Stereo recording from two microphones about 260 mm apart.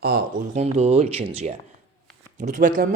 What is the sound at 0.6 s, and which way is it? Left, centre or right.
Speech, right.